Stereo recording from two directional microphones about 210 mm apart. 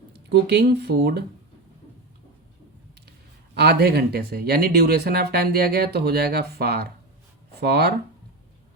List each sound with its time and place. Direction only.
0.3 s speech: 50° right (ahead or behind)
3.1 s speech: 50° right (ahead or behind)